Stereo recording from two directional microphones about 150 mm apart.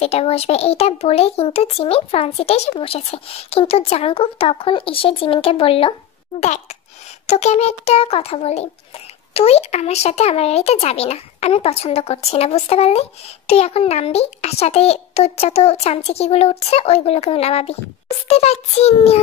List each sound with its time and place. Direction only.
0.0 s a child's voice: 40° left (ahead or behind)
6.4 s speech: 50° left (ahead or behind)